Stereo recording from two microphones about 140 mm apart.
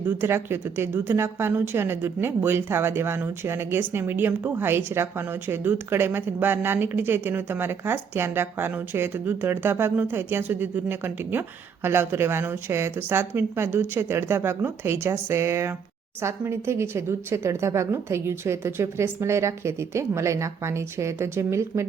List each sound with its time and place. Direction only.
0.0 s a woman's voice: 15° right (ahead or behind)